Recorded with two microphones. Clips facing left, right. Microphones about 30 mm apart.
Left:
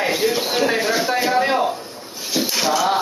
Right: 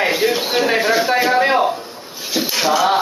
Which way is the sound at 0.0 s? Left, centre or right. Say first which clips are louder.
Right 3 dB; centre.